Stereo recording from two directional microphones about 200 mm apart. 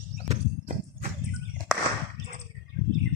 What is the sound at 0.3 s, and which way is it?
Clip-clop, 40° right (ahead or behind).